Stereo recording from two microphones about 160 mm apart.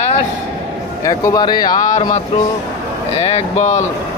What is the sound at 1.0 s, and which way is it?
Speech, 20° left (ahead or behind).